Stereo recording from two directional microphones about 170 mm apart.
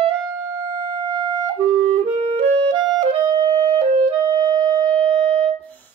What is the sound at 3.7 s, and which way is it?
Music, 45° right (ahead or behind).